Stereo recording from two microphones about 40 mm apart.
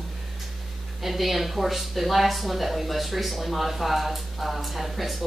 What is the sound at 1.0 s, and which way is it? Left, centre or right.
Speech, centre.